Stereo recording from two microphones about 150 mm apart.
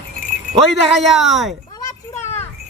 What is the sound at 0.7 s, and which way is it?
Speech, centre (ahead or behind).